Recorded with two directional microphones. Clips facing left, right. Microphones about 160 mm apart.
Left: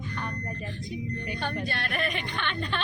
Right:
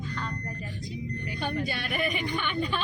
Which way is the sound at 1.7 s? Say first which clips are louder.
Right 1 dB; 10° right (ahead or behind).